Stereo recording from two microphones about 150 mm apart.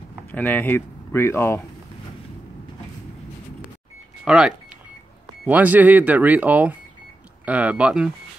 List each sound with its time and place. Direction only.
0.3 s speech: 10° left (ahead or behind)
4.2 s speech: 5° right (ahead or behind)